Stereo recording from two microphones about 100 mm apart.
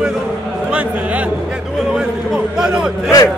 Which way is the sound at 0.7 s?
15° right (ahead or behind).